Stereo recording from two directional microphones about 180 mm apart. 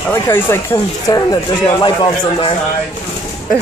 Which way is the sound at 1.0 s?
20° left (ahead or behind).